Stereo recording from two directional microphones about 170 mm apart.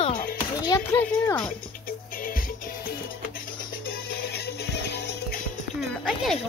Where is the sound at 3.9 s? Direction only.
70° left (ahead or behind).